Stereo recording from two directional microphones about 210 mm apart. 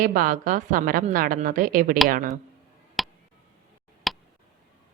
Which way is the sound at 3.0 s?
Centre (ahead or behind).